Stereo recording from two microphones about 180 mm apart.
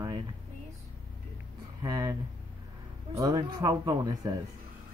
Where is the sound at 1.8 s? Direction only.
20° right (ahead or behind).